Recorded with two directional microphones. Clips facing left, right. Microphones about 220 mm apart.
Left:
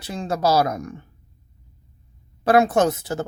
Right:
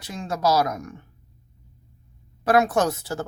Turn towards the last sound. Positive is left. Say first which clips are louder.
# left 3 dB
turn(degrees=20)  # may be behind; listen again after turning